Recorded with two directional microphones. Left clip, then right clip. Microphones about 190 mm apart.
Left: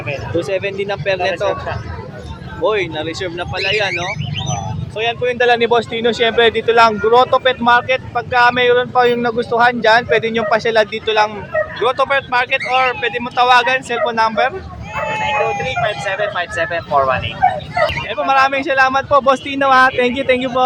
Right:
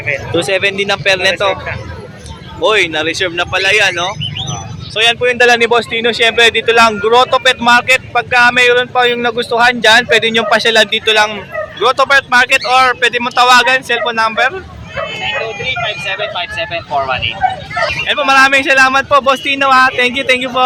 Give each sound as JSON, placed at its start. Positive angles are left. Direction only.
{"t": 0.3, "sound": "speech", "side_deg": 0}
{"t": 2.6, "sound": "speech", "side_deg": 0}
{"t": 15.1, "sound": "vehicle", "side_deg": 45}
{"t": 18.1, "sound": "speech", "side_deg": 0}